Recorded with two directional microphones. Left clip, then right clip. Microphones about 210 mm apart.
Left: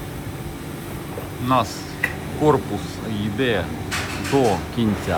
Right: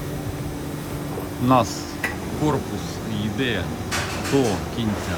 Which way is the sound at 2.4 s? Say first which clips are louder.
Left 6 dB; 5° right (ahead or behind).